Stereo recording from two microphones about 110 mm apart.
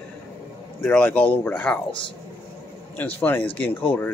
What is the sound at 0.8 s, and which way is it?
Speech, 15° left (ahead or behind).